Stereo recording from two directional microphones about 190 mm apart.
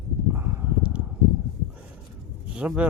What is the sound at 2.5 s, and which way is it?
Speech, 5° right (ahead or behind).